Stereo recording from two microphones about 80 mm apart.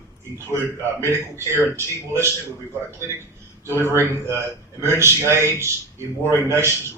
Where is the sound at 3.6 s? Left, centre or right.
Right.